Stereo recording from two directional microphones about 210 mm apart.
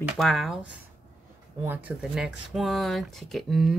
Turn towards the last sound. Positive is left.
turn(degrees=0)  # may be behind; listen again after turning